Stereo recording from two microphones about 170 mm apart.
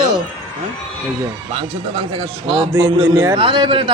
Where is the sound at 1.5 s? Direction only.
30° right (ahead or behind).